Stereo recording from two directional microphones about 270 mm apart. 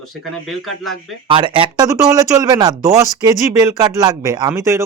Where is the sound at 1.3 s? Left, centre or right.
Centre.